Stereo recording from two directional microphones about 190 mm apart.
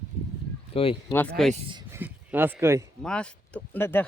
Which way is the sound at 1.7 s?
10° right (ahead or behind).